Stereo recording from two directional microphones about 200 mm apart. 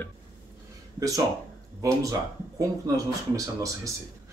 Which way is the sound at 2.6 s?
15° right (ahead or behind).